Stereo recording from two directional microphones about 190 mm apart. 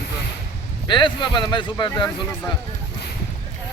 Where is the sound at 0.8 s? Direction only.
25° left (ahead or behind).